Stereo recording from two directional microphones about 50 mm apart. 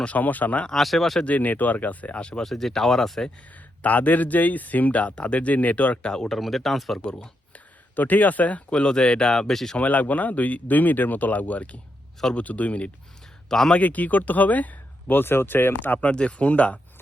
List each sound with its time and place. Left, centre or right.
0.0 s speech: left
0.7 s speech: centre
1.2 s speech: left
2.4 s speech: centre
3.8 s speech: left
6.1 s speech: centre
7.0 s a sound: centre
7.9 s speech: left; by 9.3 s centre
9.3 s speech: centre
9.7 s speech: left
13.5 s speech: centre
13.7 s speech: left
15.1 s speech: left
16.0 s speech: left